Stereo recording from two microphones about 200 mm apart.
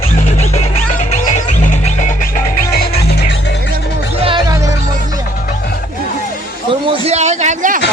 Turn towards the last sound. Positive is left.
turn(degrees=-40)  # may be behind; listen again after turning